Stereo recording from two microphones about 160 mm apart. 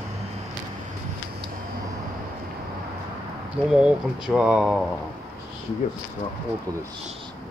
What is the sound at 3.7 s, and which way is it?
Speech, 5° right (ahead or behind).